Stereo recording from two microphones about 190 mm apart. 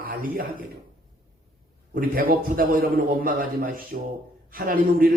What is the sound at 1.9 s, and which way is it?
A man's voice, 50° right (ahead or behind).